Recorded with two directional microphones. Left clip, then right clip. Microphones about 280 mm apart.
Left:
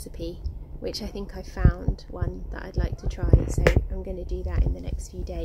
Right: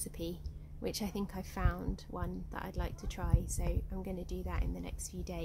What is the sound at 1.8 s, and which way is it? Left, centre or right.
Speech, right.